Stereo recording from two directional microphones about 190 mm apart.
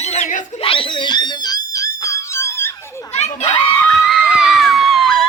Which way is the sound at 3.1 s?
35° left (ahead or behind).